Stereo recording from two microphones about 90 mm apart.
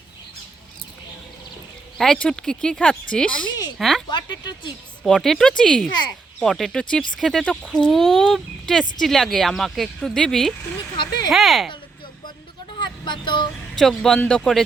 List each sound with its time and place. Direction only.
2.0 s speech: 10° left (ahead or behind)
4.1 s speech: 55° left (ahead or behind)
5.0 s speech: 5° left (ahead or behind)
10.9 s a sound: 55° left (ahead or behind)
11.3 s speech: centre (ahead or behind)
12.8 s speech: 60° left (ahead or behind)
13.7 s speech: 5° left (ahead or behind)